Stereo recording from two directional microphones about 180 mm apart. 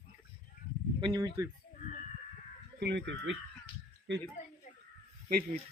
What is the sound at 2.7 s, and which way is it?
Speech, 70° right (ahead or behind).